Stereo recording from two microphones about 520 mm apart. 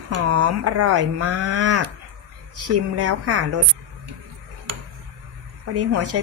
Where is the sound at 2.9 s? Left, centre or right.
Right.